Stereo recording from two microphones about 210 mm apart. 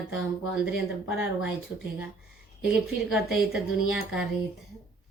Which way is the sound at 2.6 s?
Centre (ahead or behind).